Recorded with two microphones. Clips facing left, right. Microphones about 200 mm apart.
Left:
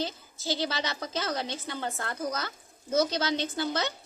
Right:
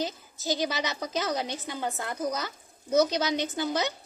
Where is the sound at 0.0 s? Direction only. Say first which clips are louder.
Right 1 dB; 15° right (ahead or behind).